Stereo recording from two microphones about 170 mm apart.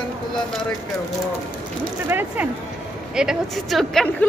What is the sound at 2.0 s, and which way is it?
A woman's voice, 10° right (ahead or behind).